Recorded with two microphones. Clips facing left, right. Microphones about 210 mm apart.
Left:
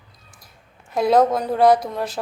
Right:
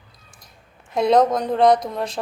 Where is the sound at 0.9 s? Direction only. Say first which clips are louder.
Even; 5° left (ahead or behind).